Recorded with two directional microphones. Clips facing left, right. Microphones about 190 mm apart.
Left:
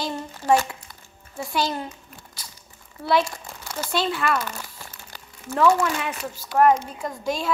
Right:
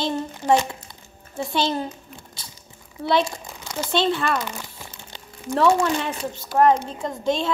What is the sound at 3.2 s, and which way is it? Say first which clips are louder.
A woman's voice: right 3 dB; 20° right (ahead or behind).